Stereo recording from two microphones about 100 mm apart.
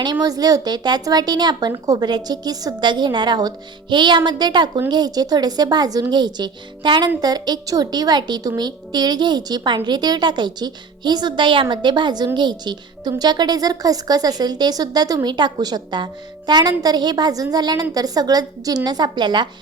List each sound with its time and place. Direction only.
0.0 s a woman's voice: 45° right (ahead or behind)